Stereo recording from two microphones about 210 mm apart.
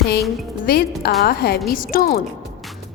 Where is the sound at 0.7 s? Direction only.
45° left (ahead or behind).